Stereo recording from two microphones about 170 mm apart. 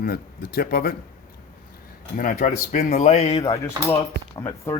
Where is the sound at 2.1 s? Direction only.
55° left (ahead or behind).